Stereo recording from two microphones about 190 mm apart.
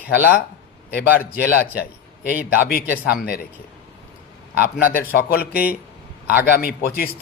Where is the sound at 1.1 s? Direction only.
50° left (ahead or behind).